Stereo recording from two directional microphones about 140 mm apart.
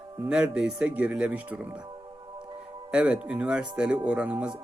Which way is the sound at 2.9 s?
5° right (ahead or behind).